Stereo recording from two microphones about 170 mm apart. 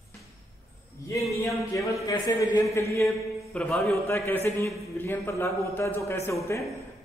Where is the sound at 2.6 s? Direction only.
15° left (ahead or behind).